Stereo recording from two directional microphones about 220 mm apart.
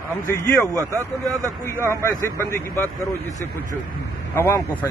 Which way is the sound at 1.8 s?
10° left (ahead or behind).